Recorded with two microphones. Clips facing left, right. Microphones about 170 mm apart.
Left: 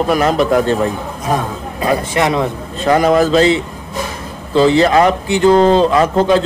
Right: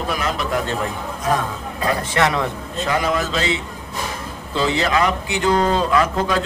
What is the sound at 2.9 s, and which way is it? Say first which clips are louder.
Speech: left 10 dB; 45° left (ahead or behind).